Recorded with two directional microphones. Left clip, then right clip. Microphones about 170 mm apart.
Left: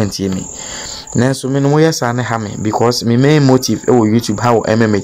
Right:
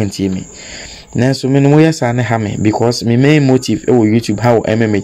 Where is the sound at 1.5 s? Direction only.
30° left (ahead or behind).